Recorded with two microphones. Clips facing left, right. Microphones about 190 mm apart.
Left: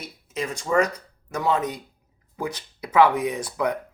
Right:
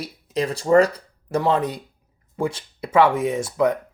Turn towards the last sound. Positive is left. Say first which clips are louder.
# right 5 dB
turn(degrees=-25)  # may be behind; listen again after turning